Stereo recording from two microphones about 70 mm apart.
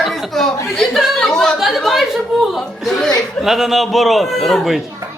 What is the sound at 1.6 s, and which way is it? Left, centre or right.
Chuckle, centre.